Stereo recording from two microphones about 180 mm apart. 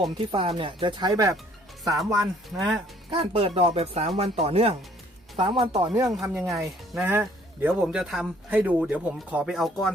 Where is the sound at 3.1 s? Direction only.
30° right (ahead or behind).